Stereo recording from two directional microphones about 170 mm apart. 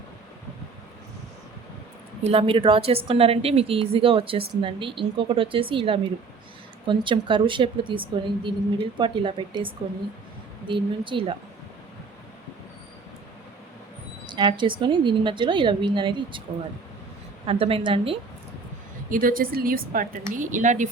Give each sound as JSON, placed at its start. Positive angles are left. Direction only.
{"t": 2.2, "sound": "a woman's voice", "side_deg": -35}
{"t": 14.3, "sound": "a woman's voice", "side_deg": -25}
{"t": 17.4, "sound": "a woman's voice", "side_deg": -35}
{"t": 19.1, "sound": "a woman's voice", "side_deg": -55}